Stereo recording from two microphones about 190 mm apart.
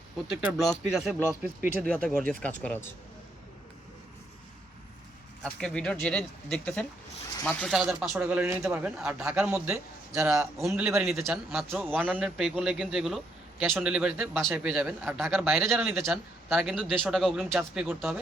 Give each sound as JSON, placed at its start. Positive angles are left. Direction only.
{"t": 0.5, "sound": "a man's voice", "side_deg": 0}
{"t": 5.4, "sound": "a man's voice", "side_deg": 5}
{"t": 10.6, "sound": "a man's voice", "side_deg": -5}
{"t": 16.7, "sound": "a man's voice", "side_deg": 5}